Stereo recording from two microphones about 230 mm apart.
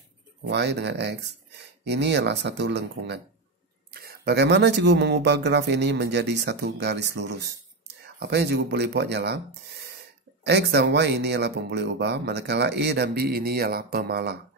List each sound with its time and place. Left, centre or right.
0.4 s speech: right